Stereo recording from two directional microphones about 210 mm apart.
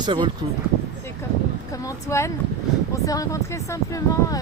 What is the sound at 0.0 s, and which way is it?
Speech, 20° right (ahead or behind).